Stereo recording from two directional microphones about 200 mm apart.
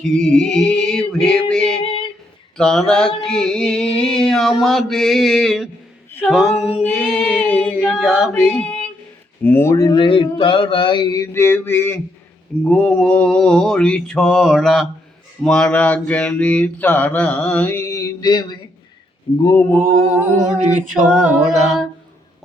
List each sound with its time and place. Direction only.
0.0 s music: 5° left (ahead or behind)
1.8 s female singing: 25° left (ahead or behind)
2.6 s mantra: 5° left (ahead or behind)
6.1 s a capella: 10° left (ahead or behind)
6.3 s singing: 5° left (ahead or behind)
9.4 s speech: 10° left (ahead or behind)
12.6 s mantra: 5° left (ahead or behind)
20.6 s a capella: 35° right (ahead or behind)
21.1 s mantra: 5° right (ahead or behind)